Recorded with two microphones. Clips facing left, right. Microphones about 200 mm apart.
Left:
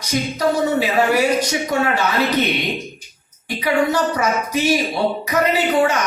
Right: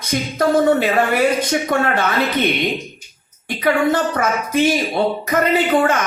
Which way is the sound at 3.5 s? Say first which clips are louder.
Right 2 dB; 55° right (ahead or behind).